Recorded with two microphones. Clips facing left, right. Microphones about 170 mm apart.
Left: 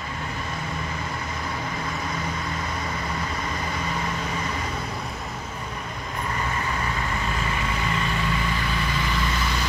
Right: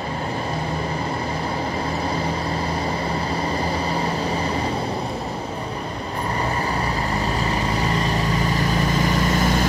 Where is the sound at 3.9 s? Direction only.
30° right (ahead or behind).